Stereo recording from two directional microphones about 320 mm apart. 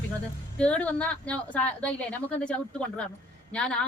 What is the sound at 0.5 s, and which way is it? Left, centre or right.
A woman's voice, centre.